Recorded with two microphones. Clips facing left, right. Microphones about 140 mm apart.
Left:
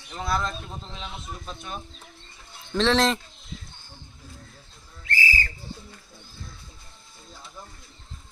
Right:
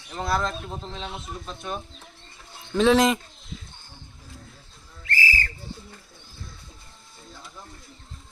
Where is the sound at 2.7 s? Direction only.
10° right (ahead or behind).